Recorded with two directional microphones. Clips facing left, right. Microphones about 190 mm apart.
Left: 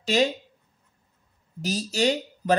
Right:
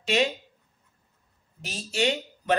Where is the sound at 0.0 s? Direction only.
35° left (ahead or behind).